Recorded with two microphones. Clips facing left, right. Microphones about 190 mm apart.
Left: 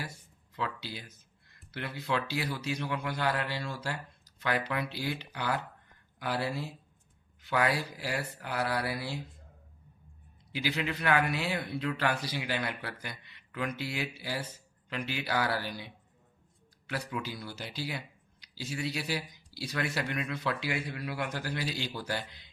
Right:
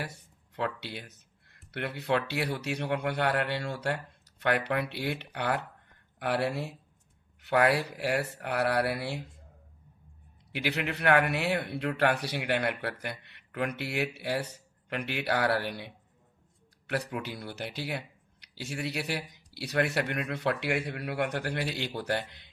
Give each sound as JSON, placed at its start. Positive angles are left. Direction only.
{"t": 0.5, "sound": "speech", "side_deg": -60}
{"t": 10.5, "sound": "speech", "side_deg": -65}
{"t": 17.1, "sound": "speech", "side_deg": -55}